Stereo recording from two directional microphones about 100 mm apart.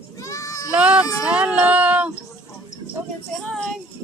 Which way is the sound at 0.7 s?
10° right (ahead or behind).